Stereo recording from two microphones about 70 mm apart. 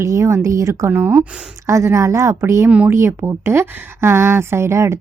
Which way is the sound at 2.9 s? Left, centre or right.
Right.